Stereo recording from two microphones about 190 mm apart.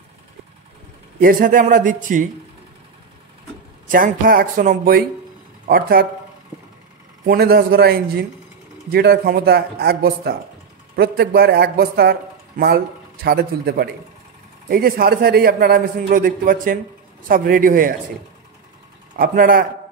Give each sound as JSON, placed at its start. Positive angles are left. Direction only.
{"t": 1.2, "sound": "a man's voice", "side_deg": -45}
{"t": 3.9, "sound": "a man's voice", "side_deg": -50}
{"t": 7.2, "sound": "a man's voice", "side_deg": -55}
{"t": 19.1, "sound": "a man's voice", "side_deg": -45}